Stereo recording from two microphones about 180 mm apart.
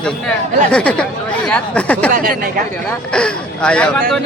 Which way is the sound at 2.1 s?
50° right (ahead or behind).